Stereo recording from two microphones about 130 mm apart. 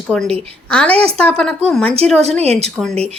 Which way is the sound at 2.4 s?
55° right (ahead or behind).